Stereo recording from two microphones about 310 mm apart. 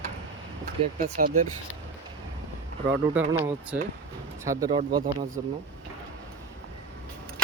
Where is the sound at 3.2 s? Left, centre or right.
Centre.